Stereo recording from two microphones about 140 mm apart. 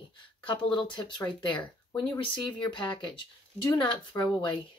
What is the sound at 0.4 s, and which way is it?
Speech, 35° left (ahead or behind).